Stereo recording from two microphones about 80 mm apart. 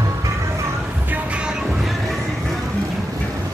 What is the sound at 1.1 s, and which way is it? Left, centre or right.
Music, centre.